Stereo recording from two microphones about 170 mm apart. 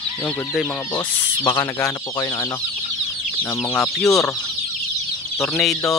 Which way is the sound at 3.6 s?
15° left (ahead or behind).